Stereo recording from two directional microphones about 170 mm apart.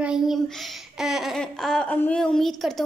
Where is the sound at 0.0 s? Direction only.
5° right (ahead or behind).